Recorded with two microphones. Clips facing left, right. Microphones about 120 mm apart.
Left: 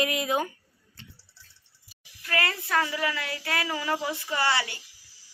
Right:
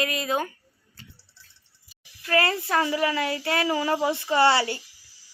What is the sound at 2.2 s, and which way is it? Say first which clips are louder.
Speech: right 6 dB; 30° right (ahead or behind).